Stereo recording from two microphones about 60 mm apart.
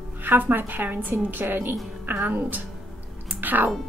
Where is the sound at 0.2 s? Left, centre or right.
Right.